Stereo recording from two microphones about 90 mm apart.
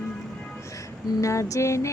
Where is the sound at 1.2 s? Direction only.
35° left (ahead or behind).